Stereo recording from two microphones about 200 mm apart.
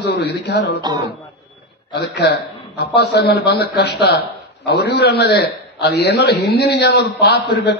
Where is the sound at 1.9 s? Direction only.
55° left (ahead or behind).